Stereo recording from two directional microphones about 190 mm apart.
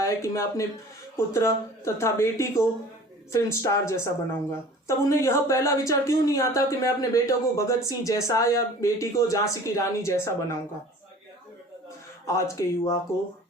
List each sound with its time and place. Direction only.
0.0 s a woman's voice: 15° left (ahead or behind)
12.2 s a woman's voice: 15° left (ahead or behind)